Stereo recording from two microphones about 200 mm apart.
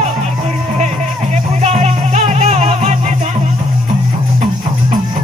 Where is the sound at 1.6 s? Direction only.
30° right (ahead or behind).